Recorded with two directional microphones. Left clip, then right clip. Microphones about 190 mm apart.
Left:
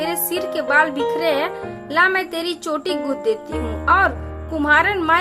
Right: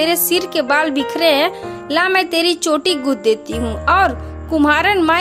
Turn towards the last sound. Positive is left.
turn(degrees=-35)  # may be behind; listen again after turning